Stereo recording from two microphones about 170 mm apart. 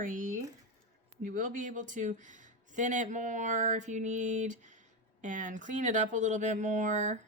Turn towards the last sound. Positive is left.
turn(degrees=-45)  # may be behind; listen again after turning